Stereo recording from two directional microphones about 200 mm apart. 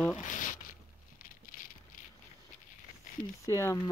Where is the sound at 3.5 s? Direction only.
15° left (ahead or behind).